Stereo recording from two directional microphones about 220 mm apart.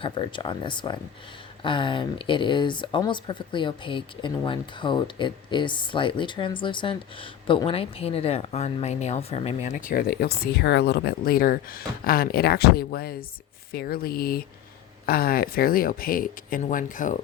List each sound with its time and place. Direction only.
0.0 s speech: 20° left (ahead or behind)